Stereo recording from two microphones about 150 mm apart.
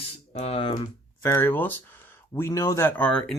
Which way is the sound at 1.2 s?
15° left (ahead or behind).